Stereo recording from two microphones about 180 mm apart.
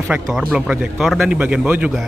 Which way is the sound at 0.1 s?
5° right (ahead or behind).